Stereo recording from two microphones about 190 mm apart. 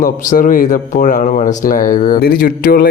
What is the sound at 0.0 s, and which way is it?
Speech, 45° left (ahead or behind).